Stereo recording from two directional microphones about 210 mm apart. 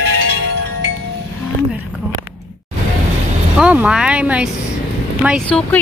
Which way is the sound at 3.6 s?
5° right (ahead or behind).